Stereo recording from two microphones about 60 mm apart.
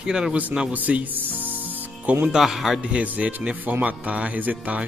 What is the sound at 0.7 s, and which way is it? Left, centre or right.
Speech, right.